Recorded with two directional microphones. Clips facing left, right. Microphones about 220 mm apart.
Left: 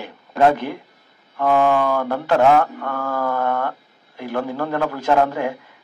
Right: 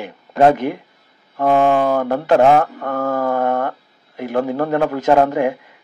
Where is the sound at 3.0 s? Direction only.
20° right (ahead or behind).